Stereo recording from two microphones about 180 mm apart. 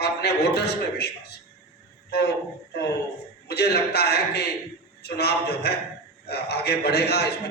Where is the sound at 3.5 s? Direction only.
65° left (ahead or behind).